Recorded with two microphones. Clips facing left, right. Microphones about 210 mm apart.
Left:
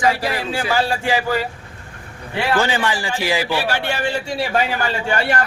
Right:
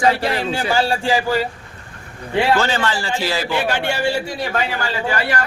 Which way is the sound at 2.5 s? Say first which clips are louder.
Even; 15° left (ahead or behind).